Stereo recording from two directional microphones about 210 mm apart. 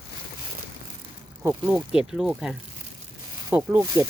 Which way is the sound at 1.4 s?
10° right (ahead or behind).